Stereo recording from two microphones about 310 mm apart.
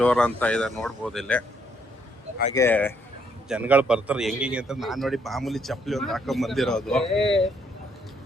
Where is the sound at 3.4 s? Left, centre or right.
Centre.